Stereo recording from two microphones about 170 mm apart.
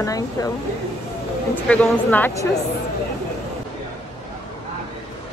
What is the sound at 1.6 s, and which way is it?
Speech, 5° left (ahead or behind).